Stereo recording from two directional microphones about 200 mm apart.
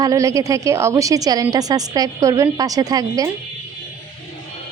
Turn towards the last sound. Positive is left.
turn(degrees=-20)  # may be behind; listen again after turning